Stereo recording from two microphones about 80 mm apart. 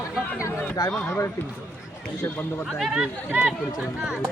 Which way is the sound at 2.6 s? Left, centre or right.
Centre.